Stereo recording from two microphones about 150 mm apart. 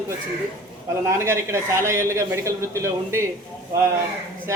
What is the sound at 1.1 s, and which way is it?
Speech, 20° right (ahead or behind).